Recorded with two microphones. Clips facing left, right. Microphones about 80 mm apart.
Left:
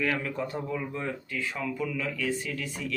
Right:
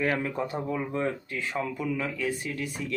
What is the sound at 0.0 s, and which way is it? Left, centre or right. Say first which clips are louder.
Speech: right 2 dB; right.